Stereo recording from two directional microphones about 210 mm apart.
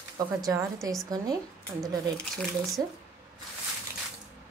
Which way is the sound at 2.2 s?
5° left (ahead or behind).